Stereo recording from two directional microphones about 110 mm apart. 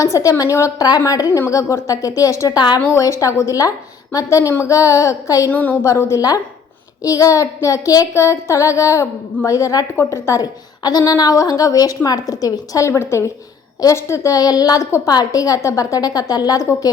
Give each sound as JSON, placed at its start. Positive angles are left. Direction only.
{"t": 0.0, "sound": "a woman's voice", "side_deg": 30}
{"t": 2.9, "sound": "child singing", "side_deg": 30}
{"t": 5.5, "sound": "a woman's voice", "side_deg": 15}
{"t": 5.8, "sound": "a woman's voice", "side_deg": 25}
{"t": 7.0, "sound": "child singing", "side_deg": 30}
{"t": 12.3, "sound": "a woman's voice", "side_deg": 30}
{"t": 12.9, "sound": "child singing", "side_deg": 25}
{"t": 13.8, "sound": "a woman's voice", "side_deg": 25}